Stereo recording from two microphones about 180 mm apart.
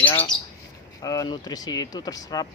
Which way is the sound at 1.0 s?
20° left (ahead or behind).